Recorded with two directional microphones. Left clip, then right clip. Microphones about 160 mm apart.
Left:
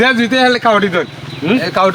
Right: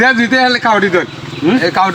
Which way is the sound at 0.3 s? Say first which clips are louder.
Even; 30° left (ahead or behind).